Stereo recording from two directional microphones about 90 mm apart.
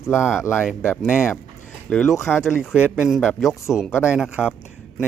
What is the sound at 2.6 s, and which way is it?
Speech, 15° right (ahead or behind).